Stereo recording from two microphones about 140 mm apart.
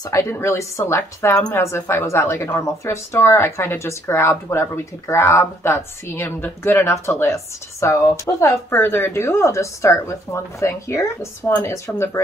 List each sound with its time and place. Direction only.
0.1 s a woman's voice: 20° left (ahead or behind)